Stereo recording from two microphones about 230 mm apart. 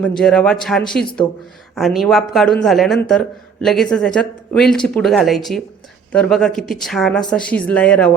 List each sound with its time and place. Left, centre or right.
0.2 s a man's voice: centre